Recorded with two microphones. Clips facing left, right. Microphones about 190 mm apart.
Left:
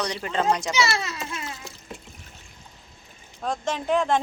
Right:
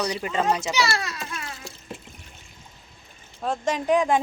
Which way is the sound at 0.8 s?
20° left (ahead or behind).